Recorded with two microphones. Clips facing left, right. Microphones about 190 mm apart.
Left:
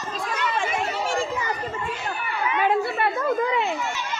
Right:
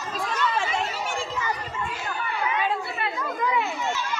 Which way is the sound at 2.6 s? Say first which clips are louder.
Left 6 dB; 55° left (ahead or behind).